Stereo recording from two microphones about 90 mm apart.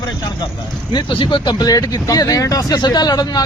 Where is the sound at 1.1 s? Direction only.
65° left (ahead or behind); by 3.4 s 45° left (ahead or behind).